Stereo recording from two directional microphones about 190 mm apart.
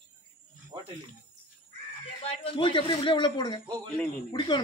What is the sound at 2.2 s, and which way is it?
A man's voice, 25° left (ahead or behind).